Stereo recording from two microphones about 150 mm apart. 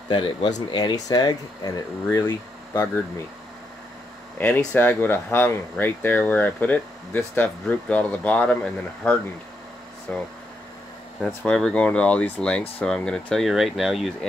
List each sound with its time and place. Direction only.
0.1 s speech: 30° left (ahead or behind)
4.6 s speech: 15° left (ahead or behind)